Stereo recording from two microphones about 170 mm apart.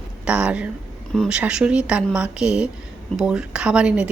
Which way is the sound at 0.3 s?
5° right (ahead or behind).